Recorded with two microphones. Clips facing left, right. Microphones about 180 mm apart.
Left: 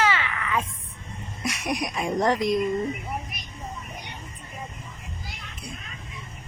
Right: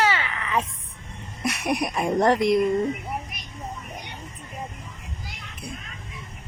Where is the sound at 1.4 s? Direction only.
60° right (ahead or behind).